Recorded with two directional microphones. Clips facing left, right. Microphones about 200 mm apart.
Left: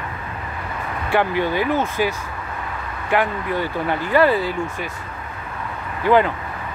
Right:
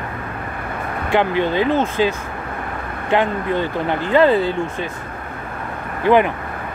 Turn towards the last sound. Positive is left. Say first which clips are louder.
# right 2 dB
turn(degrees=-20)  # may be behind; listen again after turning